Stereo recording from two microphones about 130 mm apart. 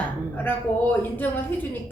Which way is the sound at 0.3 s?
15° left (ahead or behind).